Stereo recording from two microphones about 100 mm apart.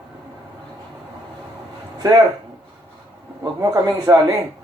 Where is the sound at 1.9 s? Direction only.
45° right (ahead or behind).